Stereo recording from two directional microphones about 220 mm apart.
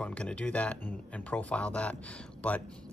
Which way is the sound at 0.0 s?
5° left (ahead or behind).